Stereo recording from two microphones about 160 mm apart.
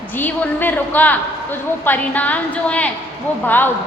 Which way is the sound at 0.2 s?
10° left (ahead or behind).